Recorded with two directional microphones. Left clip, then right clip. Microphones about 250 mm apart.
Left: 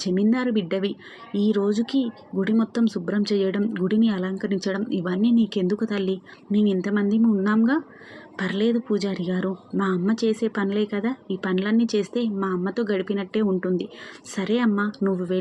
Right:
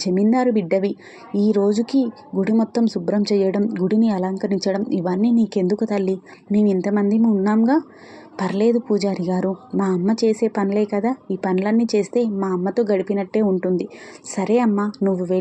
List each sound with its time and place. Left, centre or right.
0.0 s speech: centre